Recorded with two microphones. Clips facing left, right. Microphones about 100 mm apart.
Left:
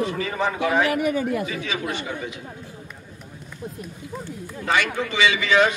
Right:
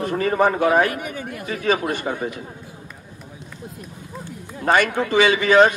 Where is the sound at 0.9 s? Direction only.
90° left.